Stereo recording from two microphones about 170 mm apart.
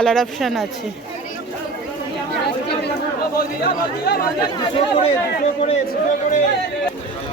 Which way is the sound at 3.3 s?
65° left (ahead or behind).